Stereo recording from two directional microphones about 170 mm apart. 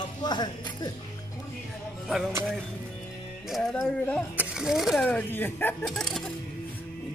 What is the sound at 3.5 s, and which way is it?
Music, 5° left (ahead or behind).